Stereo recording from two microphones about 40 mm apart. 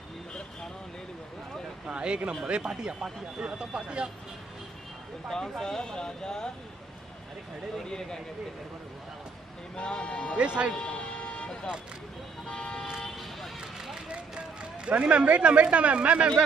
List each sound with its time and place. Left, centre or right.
1.9 s speech: right
5.6 s speech: centre
7.7 s speech: centre
9.8 s speech: left
10.3 s speech: right
10.7 s music: left
12.4 s speech: left
13.6 s vehicle: centre
14.0 s a man's voice: right